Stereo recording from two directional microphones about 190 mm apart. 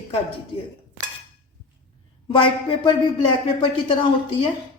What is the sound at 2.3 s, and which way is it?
Speech, 25° left (ahead or behind).